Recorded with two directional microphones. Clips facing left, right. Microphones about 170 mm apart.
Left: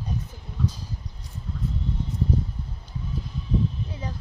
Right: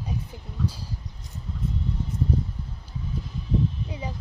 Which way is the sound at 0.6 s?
10° right (ahead or behind).